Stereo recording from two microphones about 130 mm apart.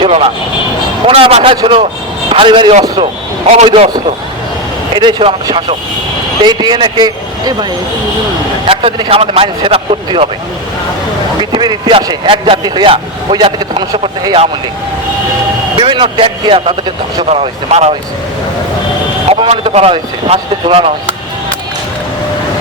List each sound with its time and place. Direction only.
0.0 s speech: 45° right (ahead or behind)
3.0 s speech: 55° right (ahead or behind)
4.9 s speech: 35° right (ahead or behind)
8.6 s speech: 45° right (ahead or behind)
11.5 s speech: 40° right (ahead or behind)
15.8 s speech: 40° right (ahead or behind)
17.2 s speech: 55° right (ahead or behind)
19.3 s speech: 45° right (ahead or behind)